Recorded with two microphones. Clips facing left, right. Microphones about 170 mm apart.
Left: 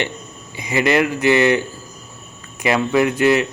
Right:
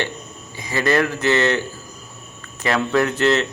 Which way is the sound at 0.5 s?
15° left (ahead or behind).